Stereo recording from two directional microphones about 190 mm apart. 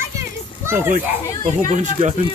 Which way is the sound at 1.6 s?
40° right (ahead or behind).